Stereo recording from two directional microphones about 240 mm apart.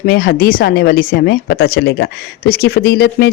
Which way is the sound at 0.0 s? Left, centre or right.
Left.